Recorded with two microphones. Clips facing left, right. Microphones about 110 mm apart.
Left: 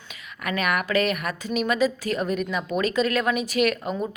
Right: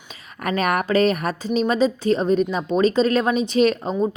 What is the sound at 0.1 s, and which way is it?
A woman's voice, 40° right (ahead or behind).